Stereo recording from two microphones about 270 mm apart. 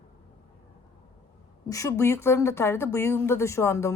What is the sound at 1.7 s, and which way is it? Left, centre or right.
Speech, centre.